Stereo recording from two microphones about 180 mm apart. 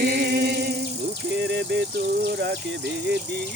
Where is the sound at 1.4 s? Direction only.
75° right (ahead or behind).